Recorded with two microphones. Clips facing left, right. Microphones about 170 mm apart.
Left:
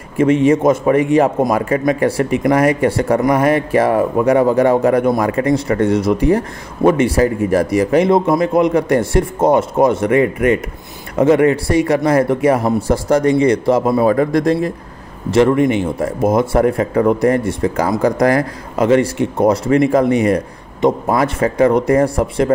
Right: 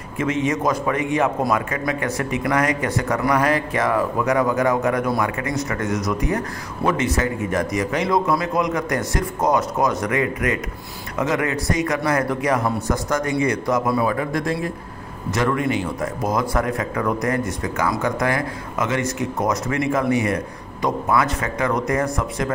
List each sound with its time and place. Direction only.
0.2 s a man's voice: 30° left (ahead or behind)
14.1 s speech: 40° left (ahead or behind)
15.3 s a man's voice: 25° left (ahead or behind)